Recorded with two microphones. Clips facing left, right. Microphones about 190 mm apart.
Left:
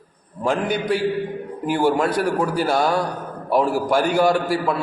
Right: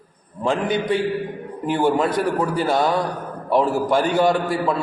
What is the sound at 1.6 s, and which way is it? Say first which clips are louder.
A man's voice: even; 10° left (ahead or behind).